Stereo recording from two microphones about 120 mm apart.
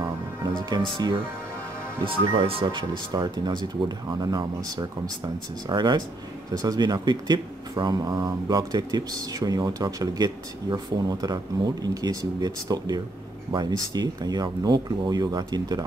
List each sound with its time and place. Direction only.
0.6 s speech: 40° right (ahead or behind)
2.0 s speech: 50° right (ahead or behind)